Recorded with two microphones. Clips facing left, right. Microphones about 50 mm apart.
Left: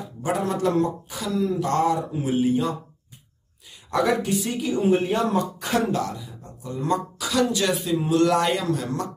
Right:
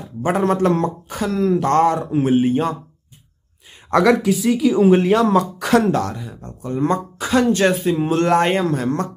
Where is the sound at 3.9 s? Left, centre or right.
Right.